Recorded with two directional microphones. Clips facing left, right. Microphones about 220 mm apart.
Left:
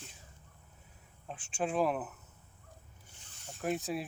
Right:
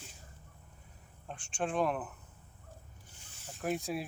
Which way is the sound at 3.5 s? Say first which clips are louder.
Even; centre (ahead or behind).